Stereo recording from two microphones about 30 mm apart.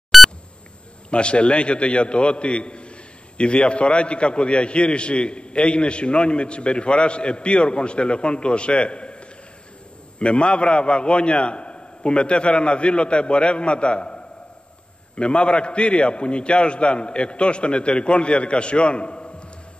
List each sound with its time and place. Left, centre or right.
0.1 s beep: centre
1.1 s a man's voice: left